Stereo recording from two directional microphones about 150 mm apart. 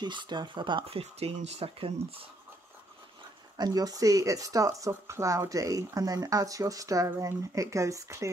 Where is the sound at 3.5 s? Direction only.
25° right (ahead or behind).